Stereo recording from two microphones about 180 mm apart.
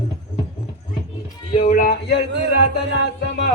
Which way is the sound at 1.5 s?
45° left (ahead or behind).